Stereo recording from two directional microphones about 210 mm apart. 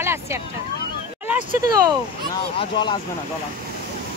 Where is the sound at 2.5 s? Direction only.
25° left (ahead or behind).